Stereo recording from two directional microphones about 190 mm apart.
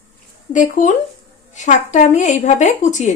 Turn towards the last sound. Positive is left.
turn(degrees=40)  # may be behind; listen again after turning